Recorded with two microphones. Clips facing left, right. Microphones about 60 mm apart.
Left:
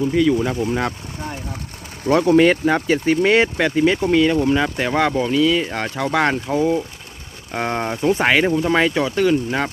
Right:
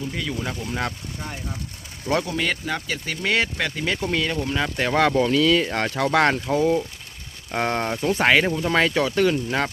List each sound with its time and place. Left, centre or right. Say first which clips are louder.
0.1 s speech: left 12 dB; centre
0.5 s speech: left 9 dB; left
2.2 s speech: left 12 dB; left; by 9.7 s centre